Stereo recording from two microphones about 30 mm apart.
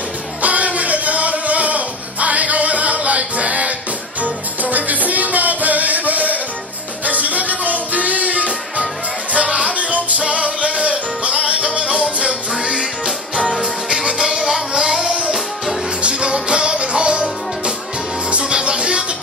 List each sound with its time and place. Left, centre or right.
0.4 s music: right
4.2 s music: right
14.2 s music: right
15.0 s music: right
18.4 s music: right